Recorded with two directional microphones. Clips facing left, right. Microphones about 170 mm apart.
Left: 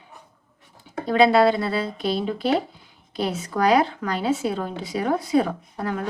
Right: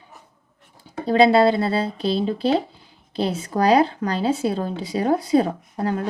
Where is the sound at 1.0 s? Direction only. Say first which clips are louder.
Right 2 dB; 30° right (ahead or behind).